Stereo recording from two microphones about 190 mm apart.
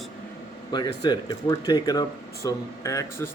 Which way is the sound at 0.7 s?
20° left (ahead or behind).